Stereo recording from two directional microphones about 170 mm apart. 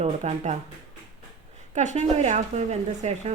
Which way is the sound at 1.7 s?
45° right (ahead or behind).